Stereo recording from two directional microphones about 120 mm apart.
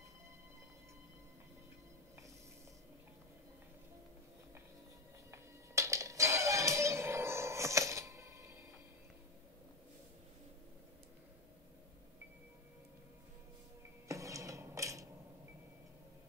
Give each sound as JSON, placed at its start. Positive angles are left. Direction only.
{"t": 5.3, "sound": "music", "side_deg": -25}
{"t": 14.0, "sound": "music", "side_deg": -25}